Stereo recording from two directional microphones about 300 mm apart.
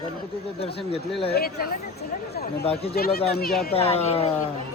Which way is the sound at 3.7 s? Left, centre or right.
Centre.